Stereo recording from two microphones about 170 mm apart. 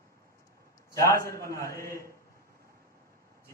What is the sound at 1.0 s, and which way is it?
A man's voice, 15° left (ahead or behind).